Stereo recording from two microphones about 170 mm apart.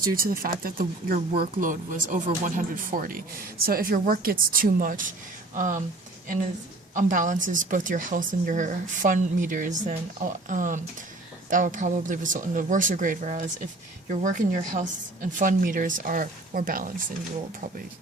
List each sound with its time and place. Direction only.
0.2 s a woman's voice: 60° right (ahead or behind)
6.9 s speech: 50° right (ahead or behind)